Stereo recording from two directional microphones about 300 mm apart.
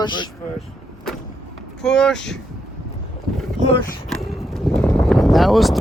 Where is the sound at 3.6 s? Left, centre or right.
Left.